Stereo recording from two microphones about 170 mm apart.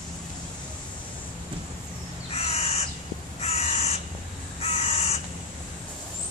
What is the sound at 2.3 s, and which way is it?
Crow, 35° left (ahead or behind).